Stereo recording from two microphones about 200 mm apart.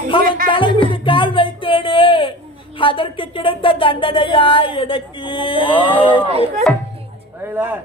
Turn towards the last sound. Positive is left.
turn(degrees=-10)  # may be behind; listen again after turning